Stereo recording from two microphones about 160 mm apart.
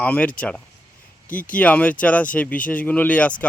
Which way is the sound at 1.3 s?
60° left (ahead or behind).